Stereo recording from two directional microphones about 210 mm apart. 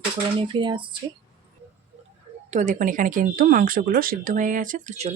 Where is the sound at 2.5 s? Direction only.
35° right (ahead or behind).